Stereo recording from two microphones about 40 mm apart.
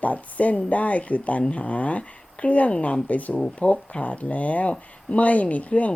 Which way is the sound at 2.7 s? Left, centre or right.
Left.